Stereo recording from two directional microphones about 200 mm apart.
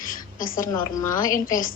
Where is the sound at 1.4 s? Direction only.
45° left (ahead or behind).